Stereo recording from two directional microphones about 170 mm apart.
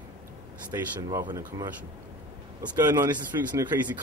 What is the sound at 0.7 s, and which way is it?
A man's voice, 20° right (ahead or behind).